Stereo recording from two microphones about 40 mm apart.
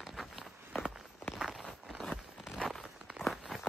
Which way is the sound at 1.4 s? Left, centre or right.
Centre.